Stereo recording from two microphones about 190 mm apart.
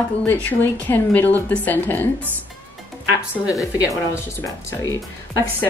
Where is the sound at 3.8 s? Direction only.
15° left (ahead or behind).